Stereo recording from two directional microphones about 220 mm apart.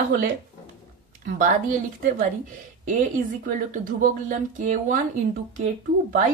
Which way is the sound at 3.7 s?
35° right (ahead or behind).